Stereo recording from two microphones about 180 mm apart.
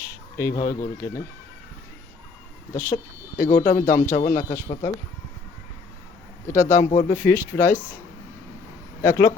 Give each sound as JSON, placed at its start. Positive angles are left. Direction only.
{"t": 0.0, "sound": "speech", "side_deg": 15}
{"t": 2.7, "sound": "speech", "side_deg": 15}
{"t": 3.5, "sound": "speech", "side_deg": 40}
{"t": 3.8, "sound": "speech", "side_deg": 15}
{"t": 4.4, "sound": "speech", "side_deg": 40}
{"t": 6.5, "sound": "speech", "side_deg": 15}
{"t": 9.0, "sound": "speech", "side_deg": 15}